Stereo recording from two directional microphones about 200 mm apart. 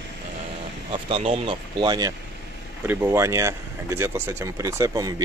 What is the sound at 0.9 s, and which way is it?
Speech, 30° right (ahead or behind).